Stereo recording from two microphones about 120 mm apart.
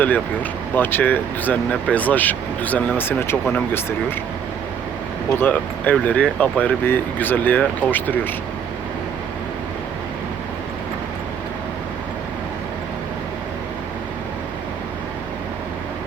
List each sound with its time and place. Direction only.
0.8 s speech: 15° left (ahead or behind)
5.4 s speech: 15° left (ahead or behind)